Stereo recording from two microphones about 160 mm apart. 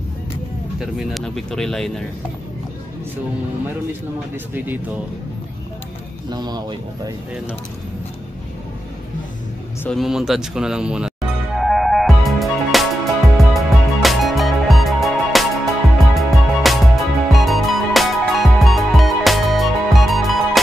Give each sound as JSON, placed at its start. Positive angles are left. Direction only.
{"t": 0.7, "sound": "speech", "side_deg": 0}
{"t": 6.3, "sound": "speech", "side_deg": -25}
{"t": 9.8, "sound": "music", "side_deg": 0}